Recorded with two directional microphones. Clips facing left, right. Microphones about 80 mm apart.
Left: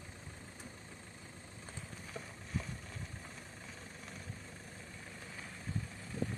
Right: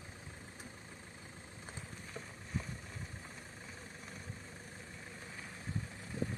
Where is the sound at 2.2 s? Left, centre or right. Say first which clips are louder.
Left 1 dB; centre.